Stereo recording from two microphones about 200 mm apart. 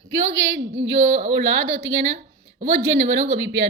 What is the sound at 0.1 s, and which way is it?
Speech, 65° right (ahead or behind).